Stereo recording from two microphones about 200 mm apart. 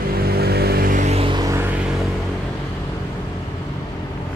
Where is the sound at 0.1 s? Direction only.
50° right (ahead or behind); by 1.6 s 20° right (ahead or behind).